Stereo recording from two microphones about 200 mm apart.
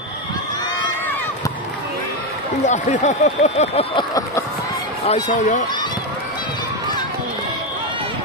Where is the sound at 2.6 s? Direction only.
35° left (ahead or behind); by 4.4 s 20° left (ahead or behind).